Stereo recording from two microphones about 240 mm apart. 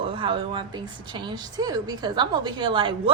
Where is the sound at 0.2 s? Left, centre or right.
Right.